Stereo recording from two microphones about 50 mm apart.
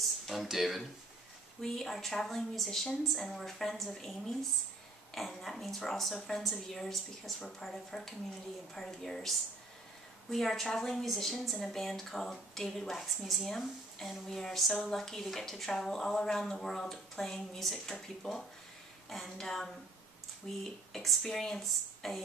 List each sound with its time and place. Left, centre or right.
0.3 s a woman's voice: centre
1.6 s a woman's voice: centre
10.3 s a woman's voice: centre